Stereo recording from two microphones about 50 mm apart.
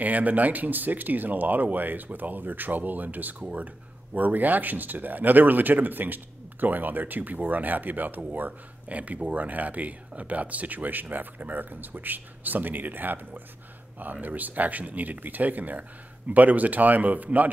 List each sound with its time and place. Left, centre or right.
0.0 s speech: right